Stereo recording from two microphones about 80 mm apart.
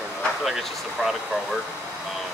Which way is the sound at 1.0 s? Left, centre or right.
Centre.